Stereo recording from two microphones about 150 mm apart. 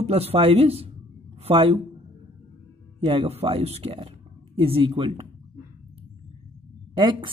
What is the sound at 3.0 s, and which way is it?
Speech, 40° right (ahead or behind).